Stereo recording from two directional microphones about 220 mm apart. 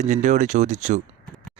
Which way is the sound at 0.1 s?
35° right (ahead or behind).